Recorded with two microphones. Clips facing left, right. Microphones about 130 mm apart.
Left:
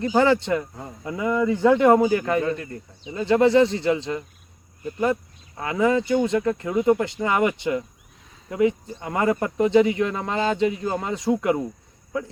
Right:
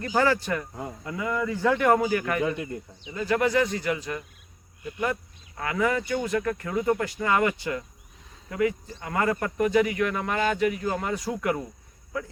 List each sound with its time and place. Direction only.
0.0 s speech: 20° left (ahead or behind)
2.4 s speech: 15° right (ahead or behind)
3.0 s speech: 25° left (ahead or behind)
4.8 s speech: 40° left (ahead or behind)
5.5 s speech: 25° left (ahead or behind)